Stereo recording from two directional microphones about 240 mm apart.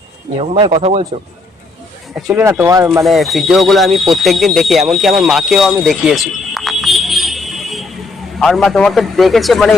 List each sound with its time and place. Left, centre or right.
0.3 s speech: right
2.2 s speech: centre
5.8 s music: centre
8.4 s speech: centre